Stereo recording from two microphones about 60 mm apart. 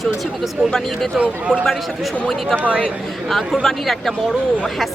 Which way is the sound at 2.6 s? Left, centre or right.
Left.